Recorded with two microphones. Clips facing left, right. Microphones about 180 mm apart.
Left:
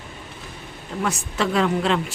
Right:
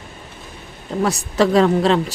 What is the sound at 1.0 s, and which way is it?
A woman's voice, 35° right (ahead or behind).